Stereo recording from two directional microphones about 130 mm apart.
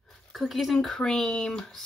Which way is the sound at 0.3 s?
Centre (ahead or behind).